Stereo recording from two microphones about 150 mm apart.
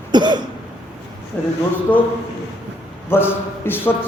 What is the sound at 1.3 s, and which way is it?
Speech, 10° left (ahead or behind).